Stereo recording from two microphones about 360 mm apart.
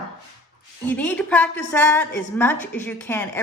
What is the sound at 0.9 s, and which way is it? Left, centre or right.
A woman's voice, centre.